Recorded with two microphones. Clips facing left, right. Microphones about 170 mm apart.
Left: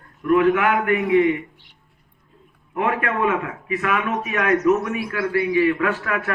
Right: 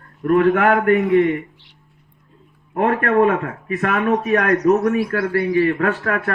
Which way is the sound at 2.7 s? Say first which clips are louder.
Right 6 dB; 45° right (ahead or behind).